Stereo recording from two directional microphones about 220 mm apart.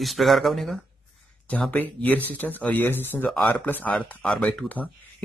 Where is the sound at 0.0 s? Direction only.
Centre (ahead or behind).